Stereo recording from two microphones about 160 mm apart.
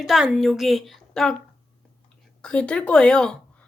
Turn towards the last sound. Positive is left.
turn(degrees=5)  # may be behind; listen again after turning